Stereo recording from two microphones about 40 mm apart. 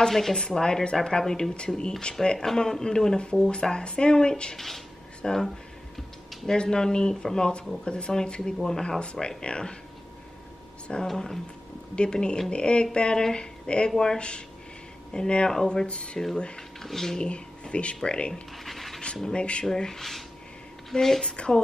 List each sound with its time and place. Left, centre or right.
0.1 s speech: centre
4.6 s speech: centre; by 9.8 s left
11.1 s speech: centre
15.5 s speech: centre
15.9 s speech: left
16.5 s speech: centre
17.2 s speech: left
18.3 s speech: centre
19.2 s speech: left
19.6 s speech: centre